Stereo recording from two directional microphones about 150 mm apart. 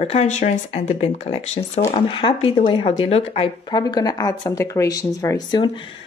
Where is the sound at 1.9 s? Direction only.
35° left (ahead or behind).